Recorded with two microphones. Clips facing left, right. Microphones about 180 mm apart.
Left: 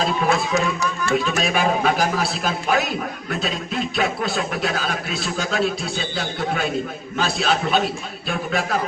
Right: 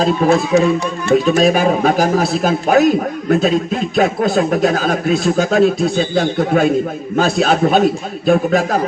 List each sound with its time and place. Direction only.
0.0 s speech: 35° right (ahead or behind)
1.1 s speech: 40° right (ahead or behind)